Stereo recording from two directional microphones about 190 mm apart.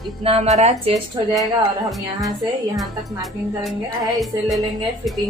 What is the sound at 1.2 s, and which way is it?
Speech, 20° right (ahead or behind).